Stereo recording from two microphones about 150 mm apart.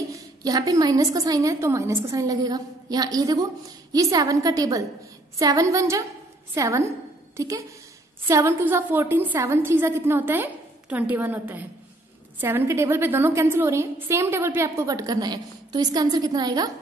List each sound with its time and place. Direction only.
0.1 s a woman's voice: 25° right (ahead or behind)